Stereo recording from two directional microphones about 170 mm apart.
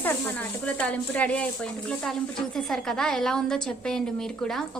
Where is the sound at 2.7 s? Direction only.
5° left (ahead or behind).